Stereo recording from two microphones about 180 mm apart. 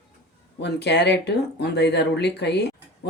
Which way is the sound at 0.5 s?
70° left (ahead or behind).